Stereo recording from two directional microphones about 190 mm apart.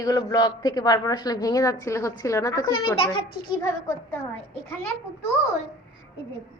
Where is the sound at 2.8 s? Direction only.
30° left (ahead or behind).